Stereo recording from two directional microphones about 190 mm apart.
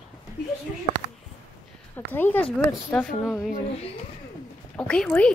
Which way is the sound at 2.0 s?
10° left (ahead or behind).